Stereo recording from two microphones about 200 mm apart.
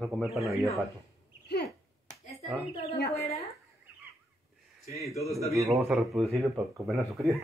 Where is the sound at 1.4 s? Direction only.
50° left (ahead or behind).